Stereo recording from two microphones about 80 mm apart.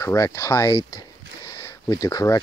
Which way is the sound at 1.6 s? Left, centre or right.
Left.